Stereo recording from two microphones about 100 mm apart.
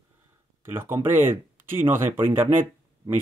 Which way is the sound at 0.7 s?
25° right (ahead or behind).